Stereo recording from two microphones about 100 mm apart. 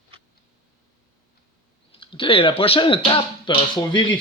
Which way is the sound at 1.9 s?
60° left (ahead or behind).